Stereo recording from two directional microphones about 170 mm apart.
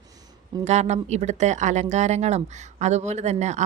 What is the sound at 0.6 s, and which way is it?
Speech, 40° right (ahead or behind).